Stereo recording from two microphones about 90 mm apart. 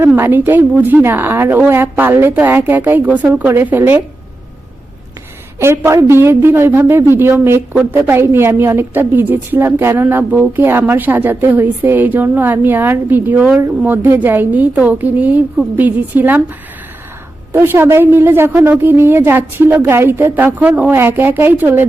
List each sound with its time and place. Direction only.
0.2 s a woman's voice: 25° right (ahead or behind)
5.5 s a woman's voice: 30° right (ahead or behind)
17.5 s a woman's voice: 25° right (ahead or behind)